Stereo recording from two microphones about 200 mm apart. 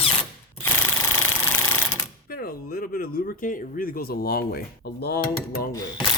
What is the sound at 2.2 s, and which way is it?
Speech, 45° left (ahead or behind).